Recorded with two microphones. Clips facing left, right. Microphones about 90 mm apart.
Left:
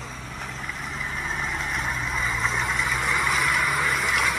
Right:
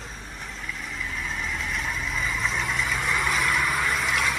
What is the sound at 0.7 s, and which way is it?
Vehicle, 40° left (ahead or behind).